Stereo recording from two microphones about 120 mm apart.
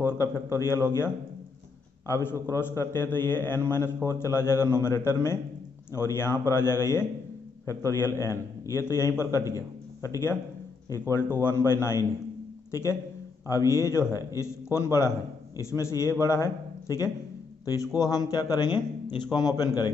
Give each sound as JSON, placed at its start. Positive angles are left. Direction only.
{"t": 0.0, "sound": "a man's voice", "side_deg": 25}